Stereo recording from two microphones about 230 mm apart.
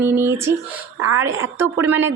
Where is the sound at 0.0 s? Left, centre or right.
Centre.